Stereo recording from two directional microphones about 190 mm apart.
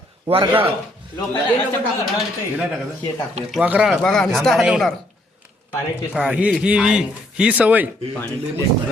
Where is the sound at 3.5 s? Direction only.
5° right (ahead or behind).